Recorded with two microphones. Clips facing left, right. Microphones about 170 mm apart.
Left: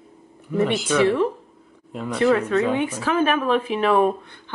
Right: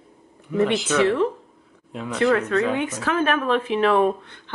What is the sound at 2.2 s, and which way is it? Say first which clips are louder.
Speech: left 1 dB; 15° left (ahead or behind).